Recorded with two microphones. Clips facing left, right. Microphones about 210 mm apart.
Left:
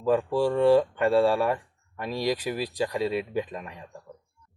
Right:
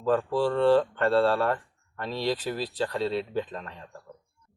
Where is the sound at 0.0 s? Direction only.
10° left (ahead or behind).